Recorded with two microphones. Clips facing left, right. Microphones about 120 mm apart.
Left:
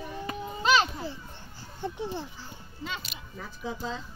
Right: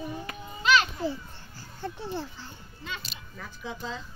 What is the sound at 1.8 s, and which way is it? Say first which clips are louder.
A child's voice: left 1 dB; 20° left (ahead or behind).